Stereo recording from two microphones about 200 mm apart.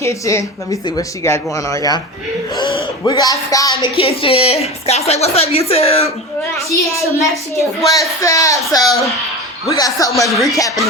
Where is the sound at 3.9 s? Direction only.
30° left (ahead or behind).